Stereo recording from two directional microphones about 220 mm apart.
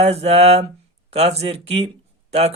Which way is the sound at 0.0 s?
30° right (ahead or behind).